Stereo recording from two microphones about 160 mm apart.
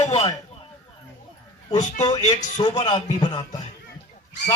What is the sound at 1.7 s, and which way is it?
Speech, 45° left (ahead or behind).